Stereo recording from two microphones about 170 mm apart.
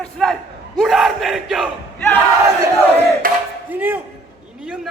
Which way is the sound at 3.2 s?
55° right (ahead or behind).